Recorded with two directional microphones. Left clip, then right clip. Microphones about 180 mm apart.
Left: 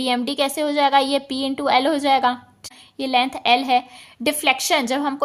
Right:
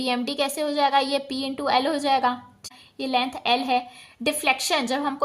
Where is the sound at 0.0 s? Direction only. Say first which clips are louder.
Left 4 dB; 25° left (ahead or behind).